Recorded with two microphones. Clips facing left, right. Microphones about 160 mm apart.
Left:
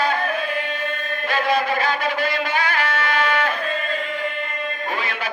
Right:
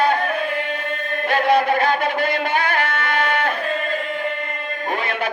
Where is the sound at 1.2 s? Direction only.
60° right (ahead or behind).